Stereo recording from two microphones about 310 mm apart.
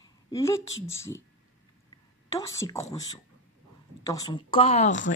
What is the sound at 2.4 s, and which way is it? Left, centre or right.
Speech, centre.